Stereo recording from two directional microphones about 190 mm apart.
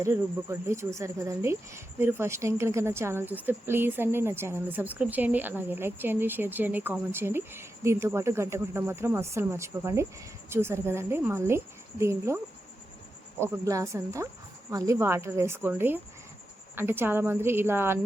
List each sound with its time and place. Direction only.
0.0 s speech: 15° right (ahead or behind)
13.4 s speech: 15° right (ahead or behind)